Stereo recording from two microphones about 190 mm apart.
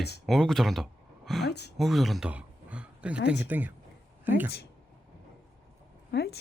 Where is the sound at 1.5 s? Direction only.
60° left (ahead or behind).